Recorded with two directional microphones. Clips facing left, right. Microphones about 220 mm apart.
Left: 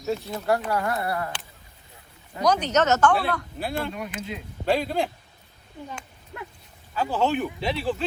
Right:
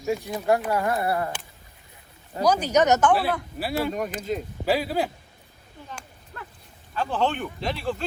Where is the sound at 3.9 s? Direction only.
45° right (ahead or behind).